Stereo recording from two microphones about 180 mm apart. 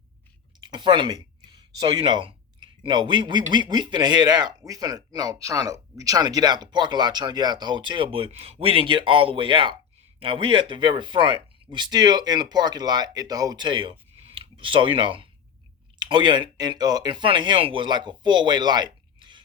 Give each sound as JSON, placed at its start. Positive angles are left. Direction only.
{"t": 0.6, "sound": "speech", "side_deg": -25}